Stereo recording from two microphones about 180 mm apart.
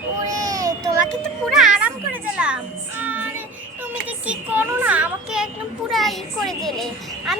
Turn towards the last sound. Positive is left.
turn(degrees=0)  # may be behind; listen again after turning